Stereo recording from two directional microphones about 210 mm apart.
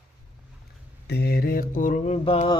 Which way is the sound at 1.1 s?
50° left (ahead or behind).